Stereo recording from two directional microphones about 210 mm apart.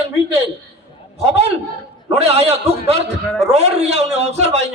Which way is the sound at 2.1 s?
30° right (ahead or behind).